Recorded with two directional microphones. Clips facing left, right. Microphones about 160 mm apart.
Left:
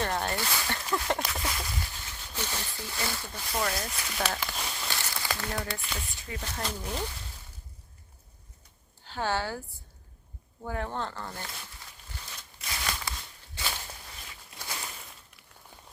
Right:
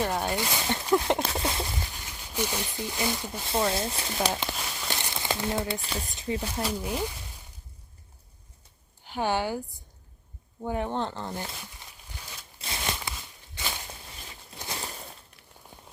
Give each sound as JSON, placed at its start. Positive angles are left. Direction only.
{"t": 0.0, "sound": "speech", "side_deg": -10}
{"t": 1.9, "sound": "speech", "side_deg": -15}
{"t": 4.9, "sound": "a sound", "side_deg": -20}
{"t": 5.8, "sound": "speech", "side_deg": -35}
{"t": 6.1, "sound": "speech", "side_deg": -25}
{"t": 6.4, "sound": "speech", "side_deg": -10}
{"t": 9.0, "sound": "a woman's voice", "side_deg": -15}
{"t": 12.5, "sound": "a sound", "side_deg": -25}
{"t": 14.6, "sound": "a sound", "side_deg": -30}